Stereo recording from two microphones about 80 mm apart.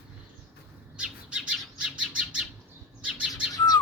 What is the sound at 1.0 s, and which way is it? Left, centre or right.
Bird, centre.